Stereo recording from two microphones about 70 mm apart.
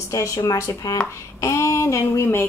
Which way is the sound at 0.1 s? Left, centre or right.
Left.